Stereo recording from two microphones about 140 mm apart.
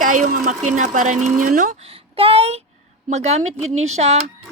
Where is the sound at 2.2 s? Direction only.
45° right (ahead or behind).